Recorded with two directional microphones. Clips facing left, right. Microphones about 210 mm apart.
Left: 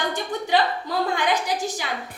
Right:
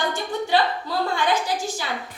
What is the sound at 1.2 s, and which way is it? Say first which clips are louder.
Speech: even; 15° left (ahead or behind).